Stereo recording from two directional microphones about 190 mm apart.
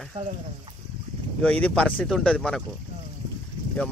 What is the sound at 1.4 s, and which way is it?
Speech, 5° left (ahead or behind).